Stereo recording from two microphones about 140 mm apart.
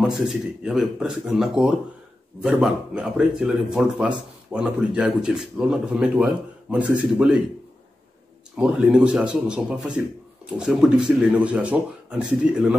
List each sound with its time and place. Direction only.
0.0 s speech: 5° right (ahead or behind)
8.5 s a man's voice: 5° right (ahead or behind)